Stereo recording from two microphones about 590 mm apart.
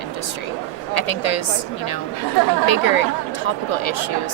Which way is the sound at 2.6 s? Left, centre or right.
Left.